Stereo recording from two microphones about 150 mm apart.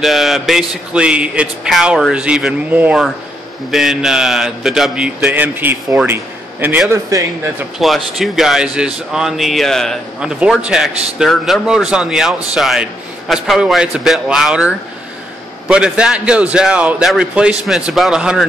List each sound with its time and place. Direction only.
0.0 s a man's voice: centre (ahead or behind); by 7.2 s 20° right (ahead or behind)
7.8 s a man's voice: centre (ahead or behind)